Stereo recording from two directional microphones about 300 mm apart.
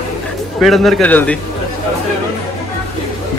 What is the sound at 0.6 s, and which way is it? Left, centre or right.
Speech, centre.